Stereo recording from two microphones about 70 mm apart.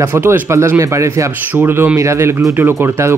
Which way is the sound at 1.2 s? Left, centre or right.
Right.